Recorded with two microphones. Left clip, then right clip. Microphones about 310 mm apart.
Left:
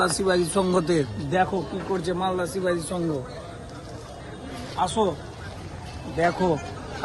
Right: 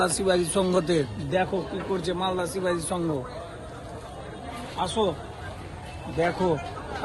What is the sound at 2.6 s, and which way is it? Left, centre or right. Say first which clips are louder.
Speech: even; centre.